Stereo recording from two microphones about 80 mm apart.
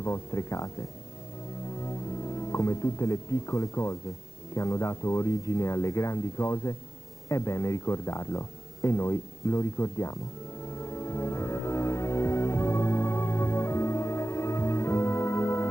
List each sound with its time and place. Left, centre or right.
0.0 s speech: left
10.7 s music: left